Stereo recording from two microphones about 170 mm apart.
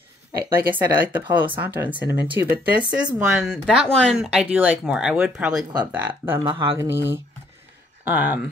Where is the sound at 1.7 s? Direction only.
10° right (ahead or behind).